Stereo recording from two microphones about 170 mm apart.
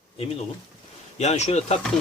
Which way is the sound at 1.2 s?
40° left (ahead or behind).